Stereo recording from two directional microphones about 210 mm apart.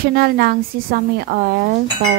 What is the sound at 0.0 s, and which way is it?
A woman's voice, 45° right (ahead or behind).